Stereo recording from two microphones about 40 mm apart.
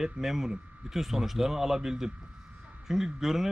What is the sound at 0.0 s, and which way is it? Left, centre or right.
Speech, centre.